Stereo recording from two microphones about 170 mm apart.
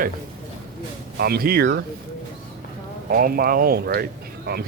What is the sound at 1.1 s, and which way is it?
Speech, 65° right (ahead or behind).